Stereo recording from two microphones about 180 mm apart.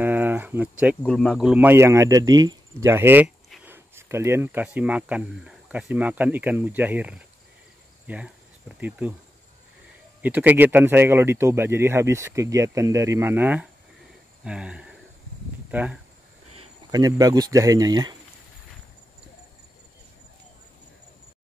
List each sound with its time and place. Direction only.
0.0 s a sound: 10° right (ahead or behind)
1.0 s speech: 5° left (ahead or behind)
10.2 s speech: 10° right (ahead or behind)
16.9 s speech: 20° right (ahead or behind)